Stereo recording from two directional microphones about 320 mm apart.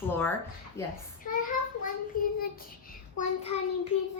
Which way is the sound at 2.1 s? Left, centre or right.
Left.